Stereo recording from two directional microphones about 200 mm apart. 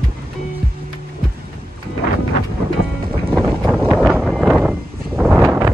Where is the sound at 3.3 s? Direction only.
Centre (ahead or behind).